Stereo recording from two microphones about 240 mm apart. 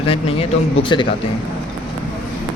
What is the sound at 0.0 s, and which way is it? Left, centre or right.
A man's voice, left.